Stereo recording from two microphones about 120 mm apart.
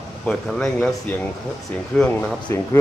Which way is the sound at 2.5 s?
20° left (ahead or behind).